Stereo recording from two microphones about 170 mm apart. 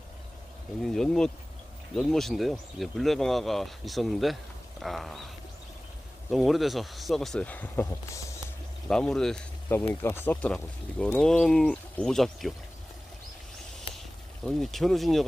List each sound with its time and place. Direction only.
0.8 s speech: centre (ahead or behind)
6.3 s speech: centre (ahead or behind); by 8.4 s 20° left (ahead or behind)
8.9 s speech: 5° left (ahead or behind)
13.9 s a sound: 35° left (ahead or behind)
14.4 s speech: centre (ahead or behind)